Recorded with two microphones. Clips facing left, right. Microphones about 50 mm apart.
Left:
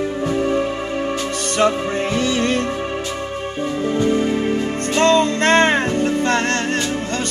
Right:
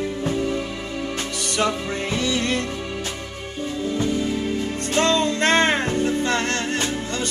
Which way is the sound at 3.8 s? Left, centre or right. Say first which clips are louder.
Left 5 dB; left.